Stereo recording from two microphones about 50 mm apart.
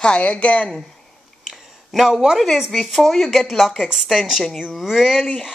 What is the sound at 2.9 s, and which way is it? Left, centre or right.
Speech, centre.